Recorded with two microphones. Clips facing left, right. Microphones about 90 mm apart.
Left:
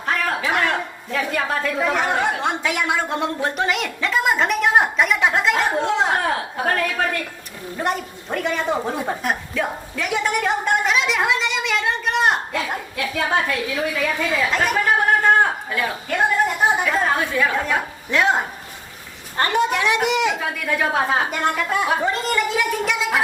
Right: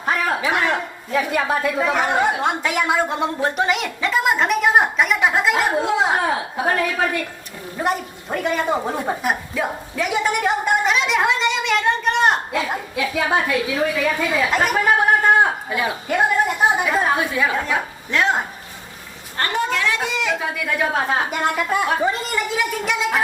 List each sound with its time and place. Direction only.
0.0 s a man's voice: 10° right (ahead or behind)
18.1 s speech: 10° left (ahead or behind)
19.4 s speech: 20° left (ahead or behind)
20.4 s a man's voice: centre (ahead or behind)